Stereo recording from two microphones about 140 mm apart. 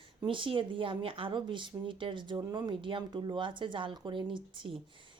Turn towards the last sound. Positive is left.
turn(degrees=-35)  # may be behind; listen again after turning